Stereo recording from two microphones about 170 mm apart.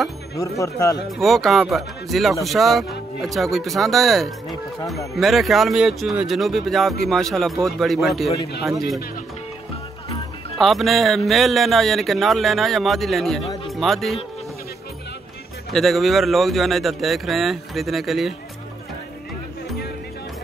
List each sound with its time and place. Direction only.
0.4 s speech: 20° left (ahead or behind)
1.1 s speech: centre (ahead or behind)
10.6 s speech: centre (ahead or behind)
15.7 s speech: centre (ahead or behind)